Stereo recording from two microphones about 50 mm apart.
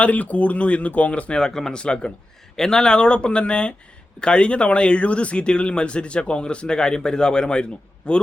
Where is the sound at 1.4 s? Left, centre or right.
Centre.